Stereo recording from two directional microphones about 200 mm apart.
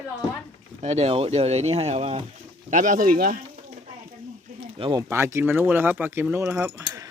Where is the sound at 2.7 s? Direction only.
40° right (ahead or behind).